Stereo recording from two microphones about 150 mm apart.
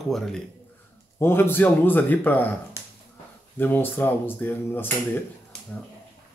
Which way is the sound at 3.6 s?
15° left (ahead or behind).